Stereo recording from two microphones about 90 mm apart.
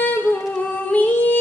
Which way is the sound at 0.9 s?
20° left (ahead or behind).